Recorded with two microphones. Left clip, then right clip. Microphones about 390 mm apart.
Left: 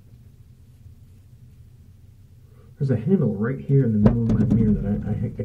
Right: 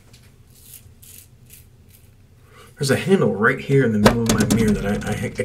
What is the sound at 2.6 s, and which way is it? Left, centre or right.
Speech, centre.